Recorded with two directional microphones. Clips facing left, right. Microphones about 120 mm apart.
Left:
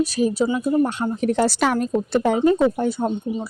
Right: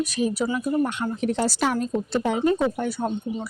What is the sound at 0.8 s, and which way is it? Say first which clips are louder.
Speech: left 3 dB; 35° left (ahead or behind).